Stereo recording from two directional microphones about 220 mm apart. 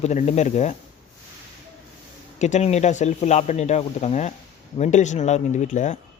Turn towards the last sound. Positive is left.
turn(degrees=35)  # may be behind; listen again after turning